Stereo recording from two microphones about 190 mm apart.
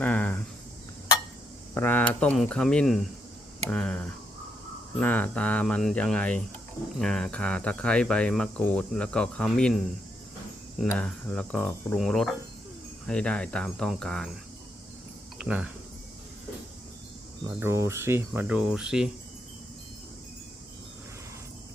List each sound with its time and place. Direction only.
0.0 s a sound: 10° left (ahead or behind)
1.7 s speech: 10° left (ahead or behind)
10.8 s speech: 5° left (ahead or behind)
15.4 s speech: 5° right (ahead or behind)
17.4 s speech: 15° right (ahead or behind)